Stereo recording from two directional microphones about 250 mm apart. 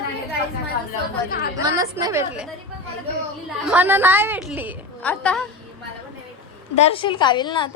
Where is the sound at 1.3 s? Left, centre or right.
Left.